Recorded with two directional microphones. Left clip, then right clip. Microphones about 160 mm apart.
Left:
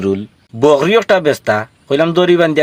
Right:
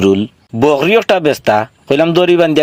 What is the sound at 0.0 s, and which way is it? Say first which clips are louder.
A man's voice: right 6 dB; 40° right (ahead or behind).